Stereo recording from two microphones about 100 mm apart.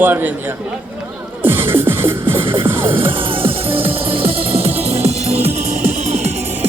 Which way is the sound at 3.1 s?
60° right (ahead or behind).